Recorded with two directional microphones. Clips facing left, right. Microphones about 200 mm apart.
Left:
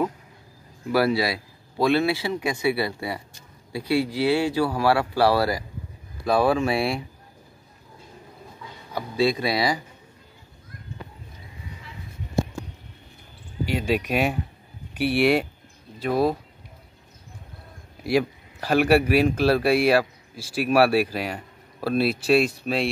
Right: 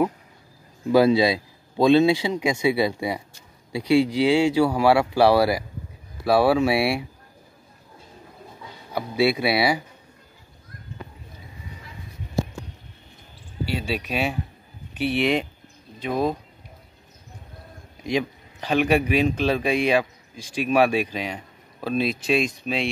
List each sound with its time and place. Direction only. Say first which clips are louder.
0.8 s a man's voice: right 5 dB; 20° right (ahead or behind)
8.9 s a man's voice: right 1 dB; 10° right (ahead or behind)
13.7 s a man's voice: left 4 dB; 15° left (ahead or behind)
18.0 s a man's voice: left 3 dB; 5° left (ahead or behind)